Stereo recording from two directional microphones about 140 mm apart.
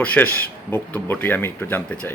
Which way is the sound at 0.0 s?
10° left (ahead or behind).